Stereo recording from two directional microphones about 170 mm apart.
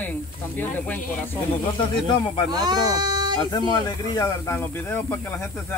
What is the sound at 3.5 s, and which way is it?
Speech, 25° left (ahead or behind).